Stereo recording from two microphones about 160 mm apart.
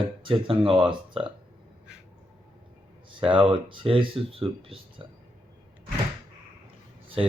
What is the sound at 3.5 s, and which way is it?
Speech, 30° right (ahead or behind).